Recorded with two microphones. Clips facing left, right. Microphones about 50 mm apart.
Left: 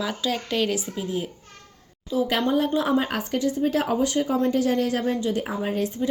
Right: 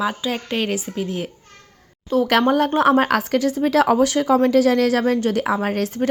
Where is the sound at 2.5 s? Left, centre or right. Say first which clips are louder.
Right 6 dB; right.